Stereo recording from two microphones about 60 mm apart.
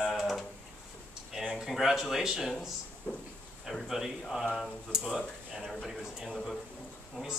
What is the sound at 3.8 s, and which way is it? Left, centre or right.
Speech, centre.